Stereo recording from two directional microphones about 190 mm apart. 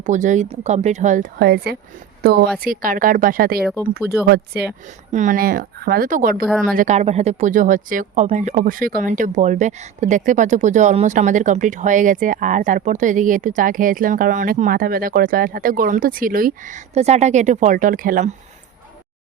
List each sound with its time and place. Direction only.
0.0 s a woman's voice: 40° right (ahead or behind); by 4.7 s 55° right (ahead or behind)
4.9 s speech: 40° right (ahead or behind)